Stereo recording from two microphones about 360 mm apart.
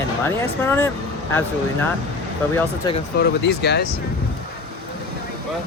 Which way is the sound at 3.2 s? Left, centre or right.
Left.